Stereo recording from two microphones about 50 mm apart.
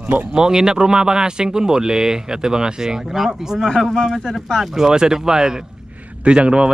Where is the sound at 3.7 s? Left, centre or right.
Centre.